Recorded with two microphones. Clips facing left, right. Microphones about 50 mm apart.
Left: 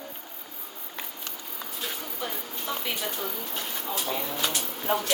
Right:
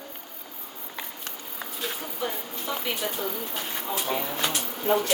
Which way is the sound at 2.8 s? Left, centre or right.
Centre.